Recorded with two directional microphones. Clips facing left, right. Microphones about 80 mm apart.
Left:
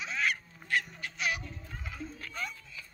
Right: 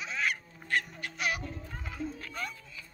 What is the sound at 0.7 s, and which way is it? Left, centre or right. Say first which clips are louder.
Crow: even; right.